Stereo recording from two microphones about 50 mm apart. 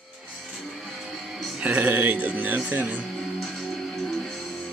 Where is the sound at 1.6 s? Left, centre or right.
Right.